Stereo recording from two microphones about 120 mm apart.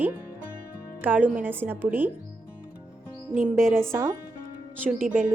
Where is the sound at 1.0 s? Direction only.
15° right (ahead or behind).